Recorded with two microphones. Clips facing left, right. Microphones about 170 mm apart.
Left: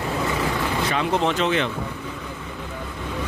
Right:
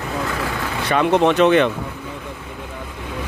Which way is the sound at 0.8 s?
65° right (ahead or behind).